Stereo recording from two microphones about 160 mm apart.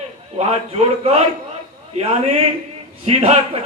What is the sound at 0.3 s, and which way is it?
A man's voice, 40° right (ahead or behind).